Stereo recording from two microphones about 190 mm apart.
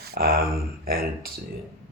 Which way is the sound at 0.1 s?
55° right (ahead or behind).